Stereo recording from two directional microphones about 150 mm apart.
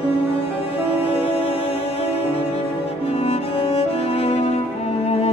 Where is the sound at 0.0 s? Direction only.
40° left (ahead or behind).